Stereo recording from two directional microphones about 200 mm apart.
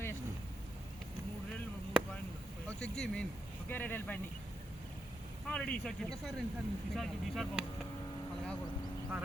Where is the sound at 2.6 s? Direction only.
5° left (ahead or behind).